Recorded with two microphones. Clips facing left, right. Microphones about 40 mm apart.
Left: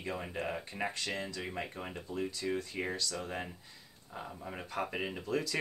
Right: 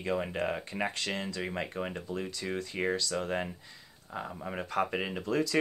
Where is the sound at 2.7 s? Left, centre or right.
Right.